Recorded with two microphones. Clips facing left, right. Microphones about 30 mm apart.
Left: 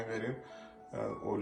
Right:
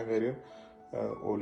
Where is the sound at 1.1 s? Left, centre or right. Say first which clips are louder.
Right 2 dB; right.